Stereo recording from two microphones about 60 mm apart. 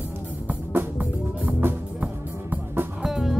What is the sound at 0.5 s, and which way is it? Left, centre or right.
Music, right.